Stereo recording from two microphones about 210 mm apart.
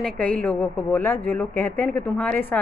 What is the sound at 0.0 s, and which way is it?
A woman's voice, 5° left (ahead or behind).